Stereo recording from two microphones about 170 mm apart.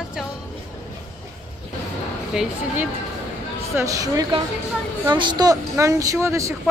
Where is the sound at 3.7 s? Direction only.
20° right (ahead or behind).